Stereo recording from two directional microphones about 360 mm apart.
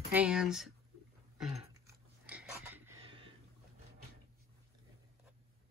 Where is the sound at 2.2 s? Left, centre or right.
Centre.